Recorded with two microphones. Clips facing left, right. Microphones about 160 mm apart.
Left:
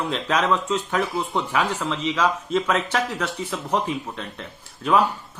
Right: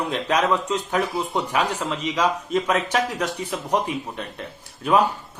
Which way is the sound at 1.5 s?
40° right (ahead or behind).